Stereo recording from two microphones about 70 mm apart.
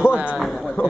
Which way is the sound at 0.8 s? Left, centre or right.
Centre.